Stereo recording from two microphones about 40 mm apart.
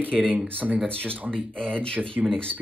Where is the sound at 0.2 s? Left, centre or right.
Right.